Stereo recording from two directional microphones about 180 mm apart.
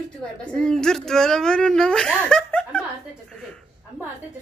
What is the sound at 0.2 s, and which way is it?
A woman's voice, 5° left (ahead or behind).